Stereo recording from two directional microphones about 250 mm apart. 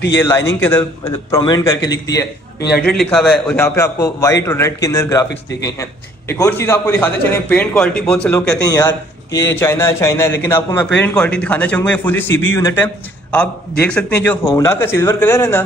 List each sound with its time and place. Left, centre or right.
0.6 s a man's voice: centre
2.0 s a man's voice: left
2.8 s a man's voice: centre
8.6 s a man's voice: centre